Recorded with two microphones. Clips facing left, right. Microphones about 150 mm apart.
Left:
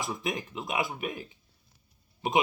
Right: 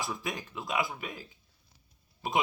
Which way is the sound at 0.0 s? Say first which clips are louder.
Left 3 dB; 20° left (ahead or behind).